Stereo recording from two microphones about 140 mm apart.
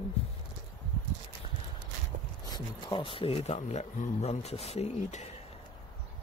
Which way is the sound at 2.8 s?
35° left (ahead or behind).